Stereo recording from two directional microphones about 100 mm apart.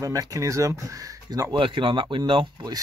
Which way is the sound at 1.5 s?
55° right (ahead or behind).